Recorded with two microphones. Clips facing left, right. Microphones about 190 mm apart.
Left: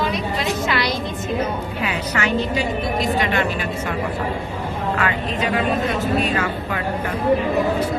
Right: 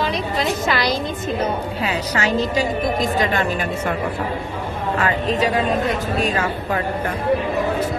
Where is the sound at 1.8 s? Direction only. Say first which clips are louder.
Right 1 dB; 40° right (ahead or behind).